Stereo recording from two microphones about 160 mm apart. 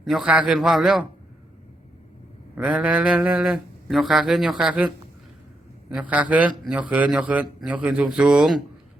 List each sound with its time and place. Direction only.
0.0 s speech: 5° right (ahead or behind)
2.6 s speech: 10° right (ahead or behind)
5.9 s a man's voice: 10° right (ahead or behind)